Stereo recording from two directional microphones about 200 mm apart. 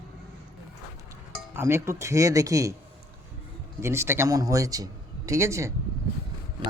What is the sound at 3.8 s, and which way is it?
Speech, 10° right (ahead or behind).